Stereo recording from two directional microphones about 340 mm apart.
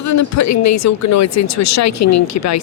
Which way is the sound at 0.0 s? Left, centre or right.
Left.